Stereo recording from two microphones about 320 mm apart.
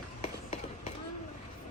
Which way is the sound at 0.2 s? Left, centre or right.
Centre.